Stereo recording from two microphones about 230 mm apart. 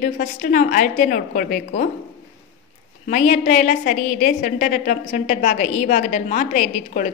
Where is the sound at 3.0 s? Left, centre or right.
Left.